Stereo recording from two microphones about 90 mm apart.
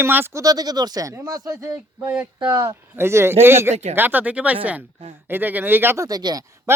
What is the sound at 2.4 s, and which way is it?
Speech, 50° right (ahead or behind).